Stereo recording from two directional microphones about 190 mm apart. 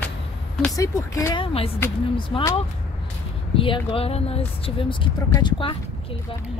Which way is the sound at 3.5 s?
30° left (ahead or behind).